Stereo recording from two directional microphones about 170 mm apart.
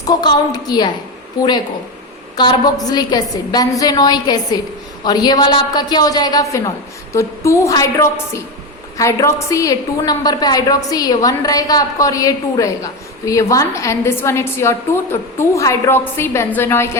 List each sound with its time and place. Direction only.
0.0 s a woman's voice: 25° left (ahead or behind)
2.3 s a woman's voice: 25° left (ahead or behind)